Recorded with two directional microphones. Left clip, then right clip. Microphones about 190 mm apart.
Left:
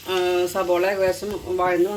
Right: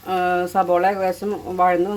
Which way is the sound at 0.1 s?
65° right (ahead or behind).